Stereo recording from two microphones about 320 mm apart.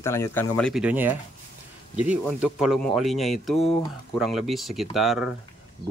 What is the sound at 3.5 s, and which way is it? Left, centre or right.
Speech, centre.